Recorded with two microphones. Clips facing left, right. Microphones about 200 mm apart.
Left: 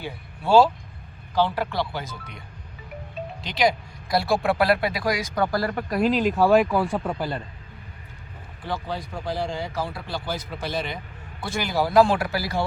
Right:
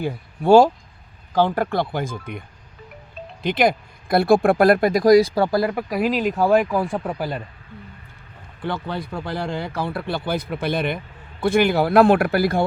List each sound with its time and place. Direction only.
0.0 s speech: 50° right (ahead or behind)
3.4 s speech: 55° right (ahead or behind); by 5.8 s 15° right (ahead or behind)
5.9 s a man's voice: 5° right (ahead or behind)
8.6 s speech: 60° right (ahead or behind)